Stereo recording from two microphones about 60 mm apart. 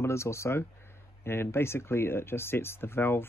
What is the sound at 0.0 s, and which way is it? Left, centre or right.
Speech, left.